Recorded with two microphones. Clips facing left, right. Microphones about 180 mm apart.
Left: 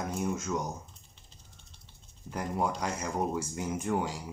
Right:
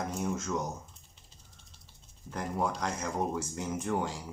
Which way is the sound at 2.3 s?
10° left (ahead or behind).